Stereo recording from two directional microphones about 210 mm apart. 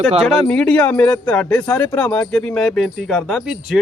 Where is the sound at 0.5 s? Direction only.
5° left (ahead or behind).